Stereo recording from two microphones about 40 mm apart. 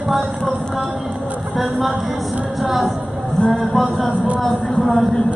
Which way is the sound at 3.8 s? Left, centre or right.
Centre.